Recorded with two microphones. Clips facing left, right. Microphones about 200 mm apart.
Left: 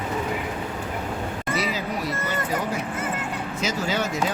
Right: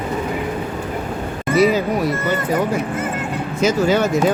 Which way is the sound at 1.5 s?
50° right (ahead or behind).